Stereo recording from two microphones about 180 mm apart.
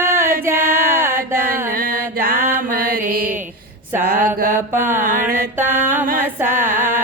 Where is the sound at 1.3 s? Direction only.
50° right (ahead or behind).